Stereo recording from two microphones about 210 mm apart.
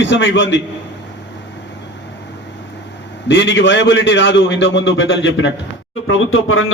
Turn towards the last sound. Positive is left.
turn(degrees=75)  # may be behind; listen again after turning